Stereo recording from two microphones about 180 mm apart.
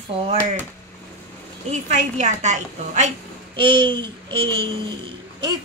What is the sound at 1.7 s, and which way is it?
Speech, 40° right (ahead or behind).